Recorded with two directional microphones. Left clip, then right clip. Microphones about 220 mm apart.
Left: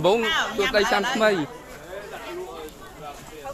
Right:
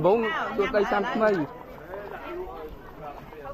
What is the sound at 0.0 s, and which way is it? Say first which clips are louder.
Speech: left 1 dB; 10° left (ahead or behind).